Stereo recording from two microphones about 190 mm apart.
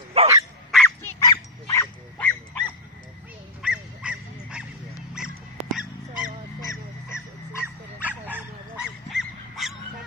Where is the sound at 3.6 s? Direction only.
5° right (ahead or behind).